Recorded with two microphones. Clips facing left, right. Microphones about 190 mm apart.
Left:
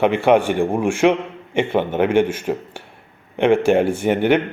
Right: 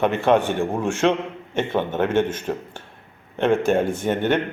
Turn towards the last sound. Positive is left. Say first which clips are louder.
# left 4 dB
turn(degrees=10)  # may be behind; listen again after turning